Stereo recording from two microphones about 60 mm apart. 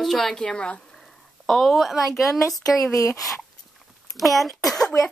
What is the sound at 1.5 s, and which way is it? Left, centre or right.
Speech, centre.